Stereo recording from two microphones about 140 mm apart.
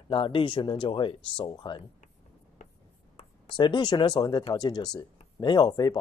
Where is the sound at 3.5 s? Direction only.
35° left (ahead or behind).